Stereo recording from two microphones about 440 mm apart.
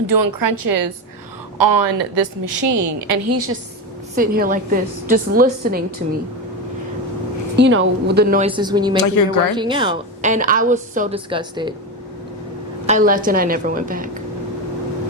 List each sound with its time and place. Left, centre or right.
0.1 s a woman's voice: right
2.1 s a woman's voice: right
4.1 s a woman's voice: centre
7.5 s a woman's voice: right; by 9.0 s centre
9.0 s speech: left
9.6 s a woman's voice: centre
12.8 s a woman's voice: centre